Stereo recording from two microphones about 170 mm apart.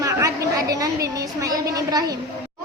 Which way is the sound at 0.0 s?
20° right (ahead or behind).